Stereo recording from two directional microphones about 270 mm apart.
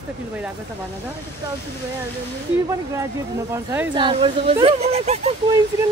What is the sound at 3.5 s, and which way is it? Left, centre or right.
Speech, centre.